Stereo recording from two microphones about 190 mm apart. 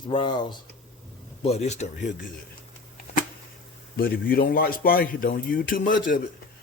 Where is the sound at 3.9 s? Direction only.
50° left (ahead or behind).